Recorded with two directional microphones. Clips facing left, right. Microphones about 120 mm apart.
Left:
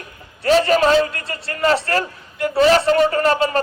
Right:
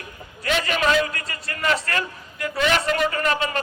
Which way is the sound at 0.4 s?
35° left (ahead or behind).